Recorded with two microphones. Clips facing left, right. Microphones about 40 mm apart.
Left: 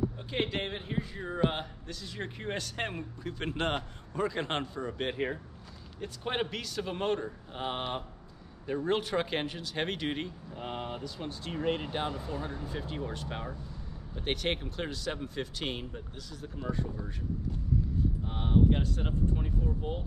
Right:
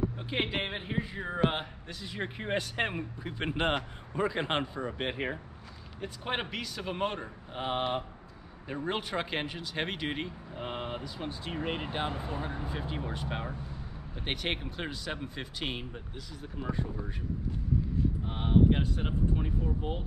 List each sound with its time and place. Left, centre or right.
0.3 s speech: centre
12.1 s speech: right
18.3 s speech: centre